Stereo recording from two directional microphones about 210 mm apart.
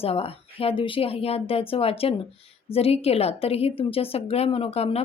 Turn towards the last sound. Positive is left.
turn(degrees=30)  # may be behind; listen again after turning